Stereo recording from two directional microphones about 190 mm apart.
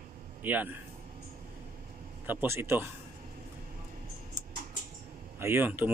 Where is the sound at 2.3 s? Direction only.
10° right (ahead or behind).